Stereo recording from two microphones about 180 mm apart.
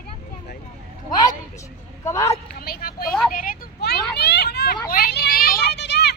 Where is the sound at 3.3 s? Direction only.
50° left (ahead or behind).